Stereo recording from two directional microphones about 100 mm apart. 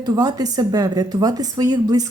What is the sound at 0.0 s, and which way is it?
A woman's voice, 40° right (ahead or behind).